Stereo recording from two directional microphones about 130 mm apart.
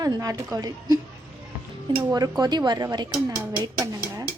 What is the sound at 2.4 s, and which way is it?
A woman's voice, 35° right (ahead or behind).